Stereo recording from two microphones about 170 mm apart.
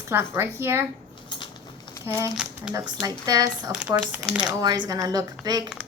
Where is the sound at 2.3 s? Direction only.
5° right (ahead or behind).